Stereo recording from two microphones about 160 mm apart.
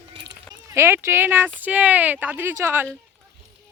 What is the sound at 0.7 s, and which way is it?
Speech, 15° right (ahead or behind).